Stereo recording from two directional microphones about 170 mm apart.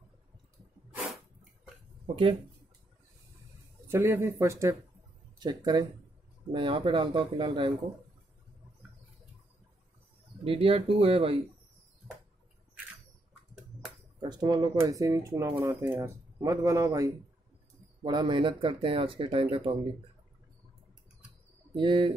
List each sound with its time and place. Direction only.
3.8 s speech: 15° right (ahead or behind)
10.4 s speech: 35° right (ahead or behind)
14.2 s speech: 25° right (ahead or behind)
21.7 s speech: 25° right (ahead or behind)